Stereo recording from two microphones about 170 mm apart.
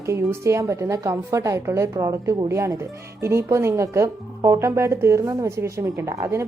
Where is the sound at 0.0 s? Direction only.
15° right (ahead or behind).